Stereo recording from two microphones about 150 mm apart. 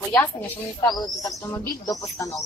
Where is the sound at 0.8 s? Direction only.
25° left (ahead or behind).